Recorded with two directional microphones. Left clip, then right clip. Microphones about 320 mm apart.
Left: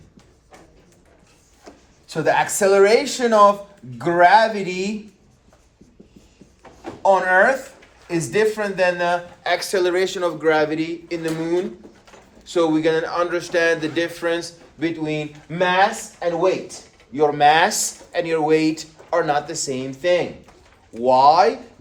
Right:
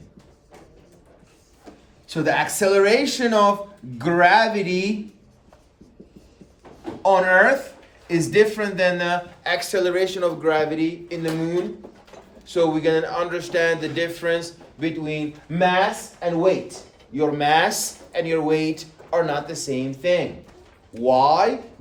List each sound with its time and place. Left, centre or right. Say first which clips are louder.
2.0 s speech: left 2 dB; centre
7.0 s speech: even; centre